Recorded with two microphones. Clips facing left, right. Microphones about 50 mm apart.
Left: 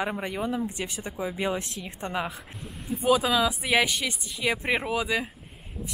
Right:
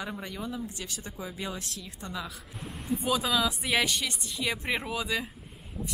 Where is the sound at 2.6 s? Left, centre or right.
Centre.